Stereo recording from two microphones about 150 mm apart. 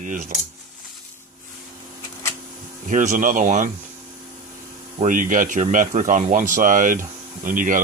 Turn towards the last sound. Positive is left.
turn(degrees=-60)  # may be behind; listen again after turning